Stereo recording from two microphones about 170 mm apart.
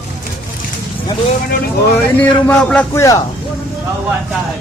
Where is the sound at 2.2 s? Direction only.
5° left (ahead or behind).